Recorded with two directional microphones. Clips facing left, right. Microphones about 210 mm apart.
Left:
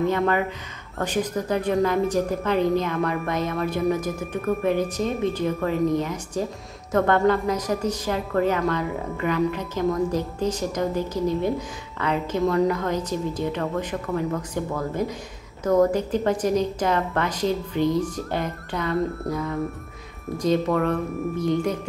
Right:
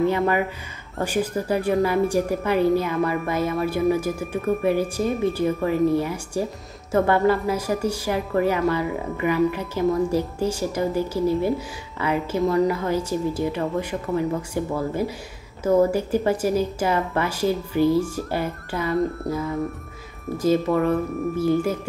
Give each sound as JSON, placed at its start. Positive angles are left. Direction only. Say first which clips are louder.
{"t": 0.0, "sound": "speech", "louder": "right 1 dB", "side_deg": -10}